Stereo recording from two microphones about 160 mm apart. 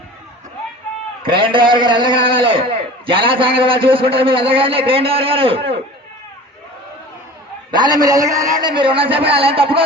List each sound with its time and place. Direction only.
1.2 s a man's voice: 30° right (ahead or behind)
7.7 s a man's voice: 25° right (ahead or behind)